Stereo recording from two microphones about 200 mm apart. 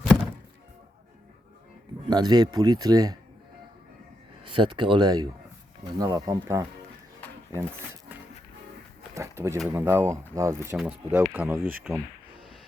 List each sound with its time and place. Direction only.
2.0 s speech: 20° right (ahead or behind)
4.4 s speech: 25° right (ahead or behind)
9.1 s speech: 15° right (ahead or behind)